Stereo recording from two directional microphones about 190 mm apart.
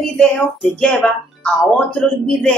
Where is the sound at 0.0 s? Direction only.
Centre (ahead or behind).